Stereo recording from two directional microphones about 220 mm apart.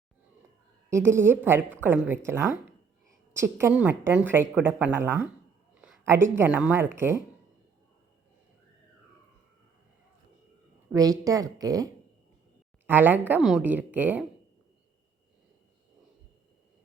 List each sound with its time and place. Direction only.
0.9 s speech: 10° right (ahead or behind)
5.7 s a sound: 10° right (ahead or behind)
6.3 s speech: 10° right (ahead or behind)
10.9 s speech: 15° right (ahead or behind)
12.9 s speech: 10° right (ahead or behind)